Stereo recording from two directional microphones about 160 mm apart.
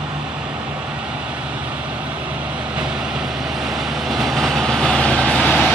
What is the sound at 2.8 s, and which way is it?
Vehicle, 5° right (ahead or behind).